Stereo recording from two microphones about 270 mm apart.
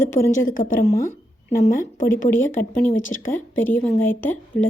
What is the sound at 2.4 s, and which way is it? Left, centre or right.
A woman's voice, centre.